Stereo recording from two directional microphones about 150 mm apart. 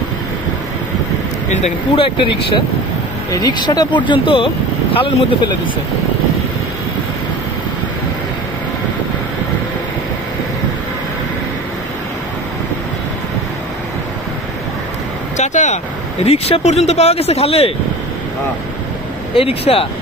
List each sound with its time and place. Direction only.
2.0 s speech: 35° left (ahead or behind)
15.3 s vehicle: 50° left (ahead or behind)
16.3 s speech: 45° left (ahead or behind)
19.3 s speech: 40° left (ahead or behind)